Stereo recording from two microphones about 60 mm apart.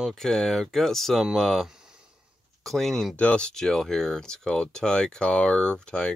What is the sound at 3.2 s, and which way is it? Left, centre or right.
Speech, centre.